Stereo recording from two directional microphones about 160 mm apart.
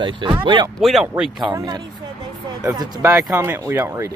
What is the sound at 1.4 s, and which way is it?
Speech, 25° right (ahead or behind).